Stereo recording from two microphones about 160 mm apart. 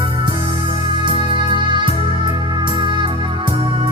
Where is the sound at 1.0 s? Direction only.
30° right (ahead or behind).